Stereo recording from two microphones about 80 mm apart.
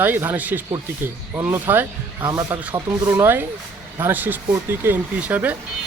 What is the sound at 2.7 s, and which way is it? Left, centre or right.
Speech, right.